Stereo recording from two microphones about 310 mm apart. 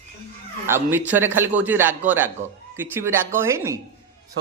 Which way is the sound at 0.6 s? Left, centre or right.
Centre.